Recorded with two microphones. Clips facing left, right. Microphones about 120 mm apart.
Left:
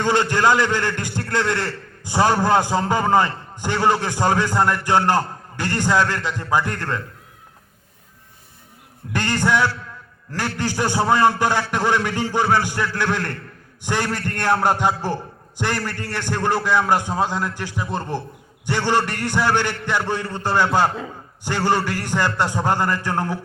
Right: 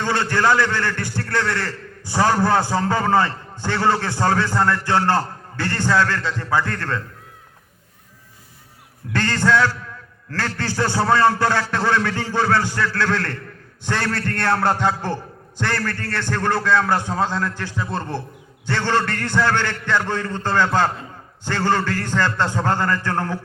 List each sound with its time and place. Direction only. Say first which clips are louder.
0.0 s a man's voice: left 2 dB; 15° left (ahead or behind)
9.1 s a man's voice: right 1 dB; 15° left (ahead or behind)